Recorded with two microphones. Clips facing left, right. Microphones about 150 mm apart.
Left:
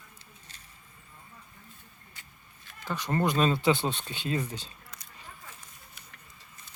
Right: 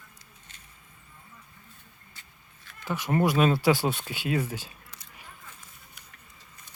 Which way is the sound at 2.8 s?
15° right (ahead or behind).